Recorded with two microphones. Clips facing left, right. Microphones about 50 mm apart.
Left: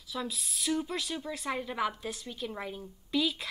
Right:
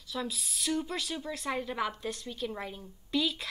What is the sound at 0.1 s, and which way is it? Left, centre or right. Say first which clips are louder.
A woman's voice: right 1 dB; centre.